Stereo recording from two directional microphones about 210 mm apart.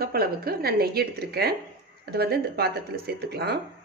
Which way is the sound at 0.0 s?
45° right (ahead or behind).